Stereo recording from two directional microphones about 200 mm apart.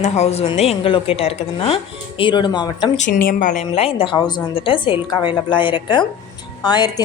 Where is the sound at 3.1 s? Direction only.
45° left (ahead or behind).